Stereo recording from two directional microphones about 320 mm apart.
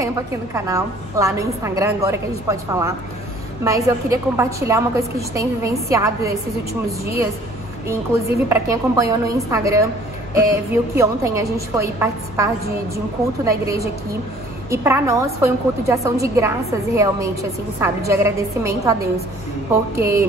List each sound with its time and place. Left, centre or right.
0.0 s a woman's voice: centre
8.5 s a woman's voice: centre
13.5 s a woman's voice: centre